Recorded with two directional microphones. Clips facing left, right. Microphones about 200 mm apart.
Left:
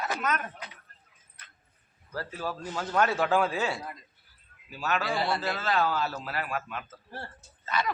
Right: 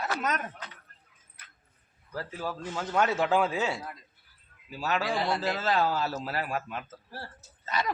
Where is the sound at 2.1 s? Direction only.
15° right (ahead or behind).